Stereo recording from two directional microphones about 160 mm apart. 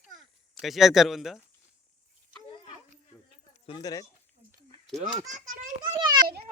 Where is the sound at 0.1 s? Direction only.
Centre (ahead or behind).